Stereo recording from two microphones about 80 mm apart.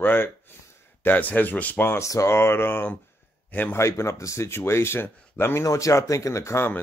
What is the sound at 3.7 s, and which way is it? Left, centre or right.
Speech, left.